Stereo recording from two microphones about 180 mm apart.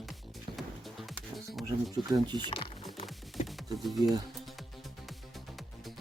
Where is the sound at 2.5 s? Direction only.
30° left (ahead or behind).